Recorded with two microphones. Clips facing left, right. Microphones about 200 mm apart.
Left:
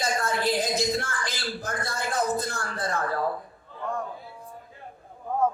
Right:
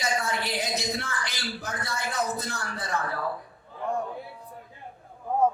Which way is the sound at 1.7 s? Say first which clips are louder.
Left 3 dB; 55° left (ahead or behind).